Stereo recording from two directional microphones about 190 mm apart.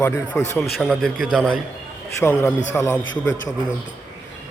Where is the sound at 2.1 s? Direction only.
15° left (ahead or behind).